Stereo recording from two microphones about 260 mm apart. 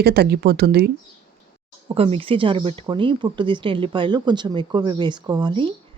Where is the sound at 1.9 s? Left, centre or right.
Right.